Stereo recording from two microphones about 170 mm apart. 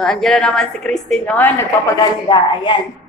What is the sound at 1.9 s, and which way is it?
Speech, 25° left (ahead or behind).